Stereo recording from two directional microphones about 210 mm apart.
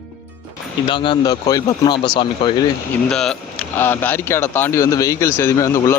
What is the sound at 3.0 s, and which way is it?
Speech, 5° left (ahead or behind).